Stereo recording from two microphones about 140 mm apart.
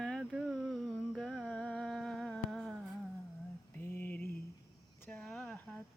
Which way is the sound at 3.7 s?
15° left (ahead or behind).